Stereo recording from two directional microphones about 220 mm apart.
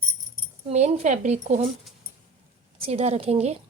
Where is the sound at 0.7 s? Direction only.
30° right (ahead or behind).